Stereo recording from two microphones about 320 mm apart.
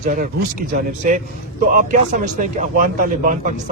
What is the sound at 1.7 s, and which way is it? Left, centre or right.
Speech, right.